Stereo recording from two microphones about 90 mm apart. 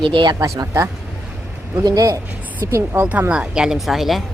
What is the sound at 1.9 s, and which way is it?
Speech, 40° right (ahead or behind).